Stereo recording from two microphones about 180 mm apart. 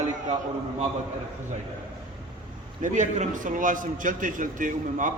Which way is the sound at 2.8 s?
40° right (ahead or behind).